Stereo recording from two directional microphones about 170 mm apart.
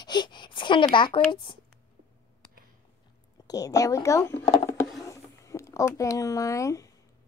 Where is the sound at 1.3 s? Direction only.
30° left (ahead or behind).